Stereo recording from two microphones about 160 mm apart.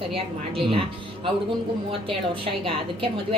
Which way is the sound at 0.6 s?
35° right (ahead or behind).